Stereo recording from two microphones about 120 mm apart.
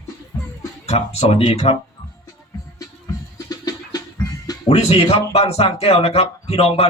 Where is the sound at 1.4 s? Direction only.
40° left (ahead or behind).